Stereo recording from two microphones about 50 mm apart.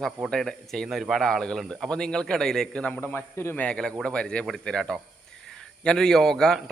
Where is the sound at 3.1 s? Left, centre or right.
Left.